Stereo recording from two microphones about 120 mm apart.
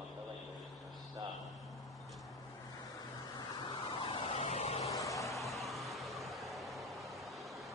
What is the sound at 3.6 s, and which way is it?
Vehicle, 45° left (ahead or behind).